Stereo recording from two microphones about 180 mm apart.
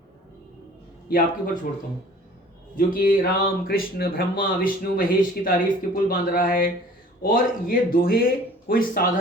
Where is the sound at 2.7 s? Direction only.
55° left (ahead or behind).